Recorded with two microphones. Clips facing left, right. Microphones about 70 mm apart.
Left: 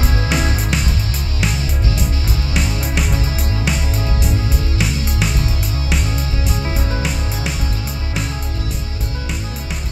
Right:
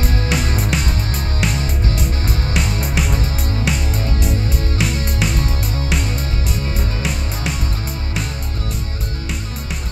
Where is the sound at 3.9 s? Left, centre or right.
Right.